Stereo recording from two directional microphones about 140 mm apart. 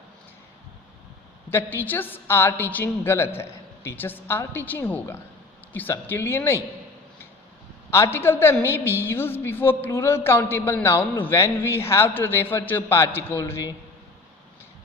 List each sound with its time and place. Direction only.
1.5 s a woman's voice: 15° left (ahead or behind)
7.9 s a woman's voice: 20° left (ahead or behind)